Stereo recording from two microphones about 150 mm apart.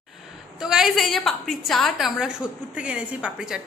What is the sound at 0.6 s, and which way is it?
A woman's voice, 5° right (ahead or behind).